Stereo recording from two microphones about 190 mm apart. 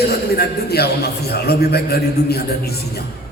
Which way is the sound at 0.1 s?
55° left (ahead or behind).